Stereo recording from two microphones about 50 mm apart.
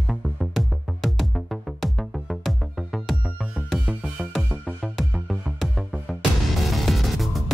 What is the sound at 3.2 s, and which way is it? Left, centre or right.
Music, centre.